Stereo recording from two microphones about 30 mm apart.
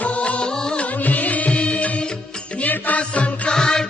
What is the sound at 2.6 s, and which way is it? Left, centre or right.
Music, left.